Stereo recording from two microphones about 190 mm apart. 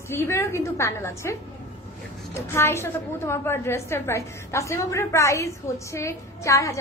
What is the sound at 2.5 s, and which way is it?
A woman's voice, 15° left (ahead or behind).